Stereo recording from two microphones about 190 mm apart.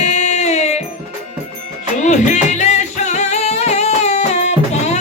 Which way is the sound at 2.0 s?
40° left (ahead or behind).